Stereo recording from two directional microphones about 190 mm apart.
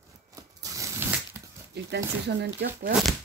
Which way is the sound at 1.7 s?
60° right (ahead or behind).